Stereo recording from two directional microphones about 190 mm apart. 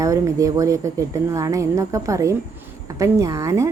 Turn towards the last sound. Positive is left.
turn(degrees=-15)  # may be behind; listen again after turning